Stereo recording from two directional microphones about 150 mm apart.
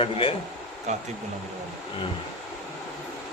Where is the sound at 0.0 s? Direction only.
40° left (ahead or behind).